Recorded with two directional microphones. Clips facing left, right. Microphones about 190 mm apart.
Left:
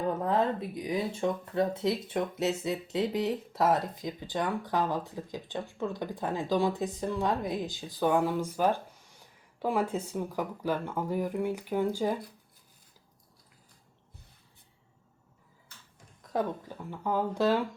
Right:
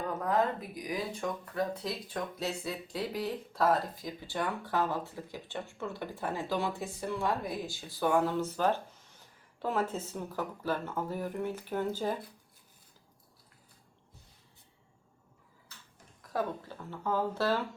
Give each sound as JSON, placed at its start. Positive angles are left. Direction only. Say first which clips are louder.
{"t": 0.0, "sound": "speech", "louder": "left 2 dB", "side_deg": 30}
{"t": 16.3, "sound": "speech", "louder": "left 3 dB", "side_deg": 15}